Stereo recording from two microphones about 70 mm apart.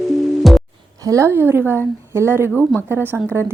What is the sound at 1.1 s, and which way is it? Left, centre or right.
Speech, right.